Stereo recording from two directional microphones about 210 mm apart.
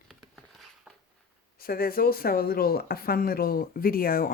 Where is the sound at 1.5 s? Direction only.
45° left (ahead or behind).